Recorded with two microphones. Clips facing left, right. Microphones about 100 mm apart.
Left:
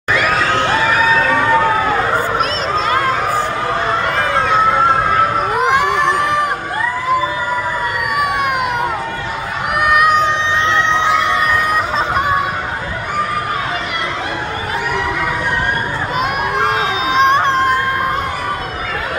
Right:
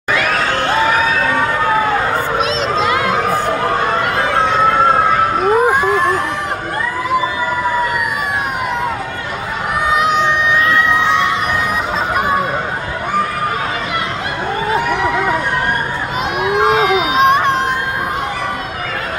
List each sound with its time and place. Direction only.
2.8 s crowd: 40° left (ahead or behind)
5.8 s a sound: 70° left (ahead or behind)
9.9 s music: 50° left (ahead or behind)
10.5 s crowd: 30° left (ahead or behind)
17.2 s music: 35° left (ahead or behind)